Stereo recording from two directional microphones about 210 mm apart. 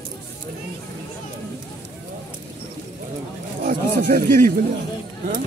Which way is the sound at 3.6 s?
40° right (ahead or behind).